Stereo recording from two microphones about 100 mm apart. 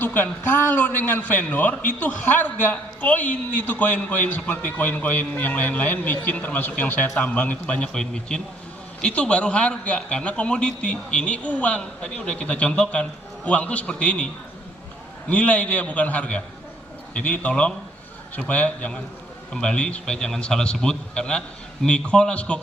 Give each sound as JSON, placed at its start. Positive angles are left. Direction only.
{"t": 0.0, "sound": "a man's voice", "side_deg": 20}
{"t": 15.3, "sound": "a man's voice", "side_deg": 15}